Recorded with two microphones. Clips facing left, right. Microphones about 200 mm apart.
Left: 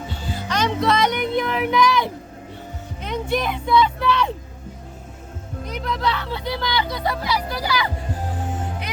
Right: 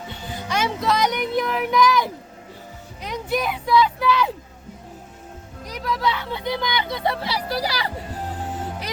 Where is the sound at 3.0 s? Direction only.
Centre (ahead or behind).